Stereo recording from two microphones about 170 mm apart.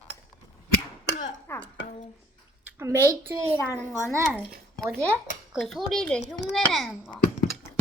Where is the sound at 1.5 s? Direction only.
15° left (ahead or behind).